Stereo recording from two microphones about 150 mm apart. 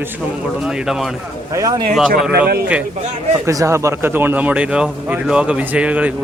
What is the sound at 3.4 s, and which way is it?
A man's voice, 20° right (ahead or behind).